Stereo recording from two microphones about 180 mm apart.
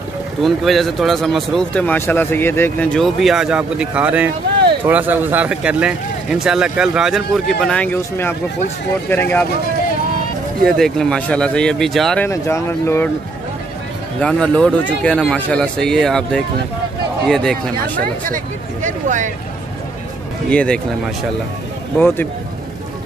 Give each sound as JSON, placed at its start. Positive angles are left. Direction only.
{"t": 0.4, "sound": "speech", "side_deg": 0}
{"t": 10.6, "sound": "speech", "side_deg": 5}
{"t": 12.3, "sound": "speech", "side_deg": 15}
{"t": 14.2, "sound": "speech", "side_deg": 5}
{"t": 18.3, "sound": "speech", "side_deg": -45}
{"t": 20.4, "sound": "speech", "side_deg": 5}
{"t": 21.9, "sound": "speech", "side_deg": 10}